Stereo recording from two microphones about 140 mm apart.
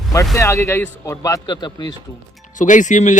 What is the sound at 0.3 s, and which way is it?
Speech, 20° left (ahead or behind).